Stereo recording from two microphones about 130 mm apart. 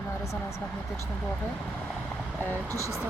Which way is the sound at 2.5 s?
25° right (ahead or behind).